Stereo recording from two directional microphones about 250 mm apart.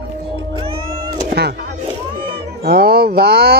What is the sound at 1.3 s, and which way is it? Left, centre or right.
Music, right.